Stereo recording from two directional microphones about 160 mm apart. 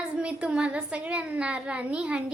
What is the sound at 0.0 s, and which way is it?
A child's voice, 5° right (ahead or behind).